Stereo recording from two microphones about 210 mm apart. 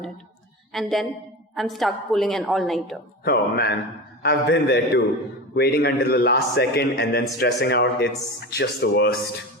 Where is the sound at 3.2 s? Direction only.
50° left (ahead or behind).